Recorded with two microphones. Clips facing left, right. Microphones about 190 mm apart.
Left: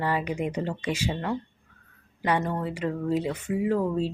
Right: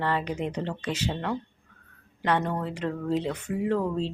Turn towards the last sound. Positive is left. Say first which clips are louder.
# left 1 dB
turn(degrees=5)  # may be behind; listen again after turning